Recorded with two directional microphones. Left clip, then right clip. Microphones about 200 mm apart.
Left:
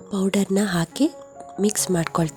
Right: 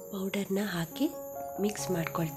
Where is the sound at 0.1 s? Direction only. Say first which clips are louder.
Left 11 dB; 45° left (ahead or behind).